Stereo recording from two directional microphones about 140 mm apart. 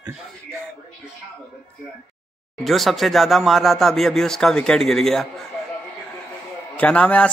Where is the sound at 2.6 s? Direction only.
Centre (ahead or behind).